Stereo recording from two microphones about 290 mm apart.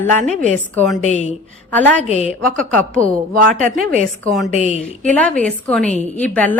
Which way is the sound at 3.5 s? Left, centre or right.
Right.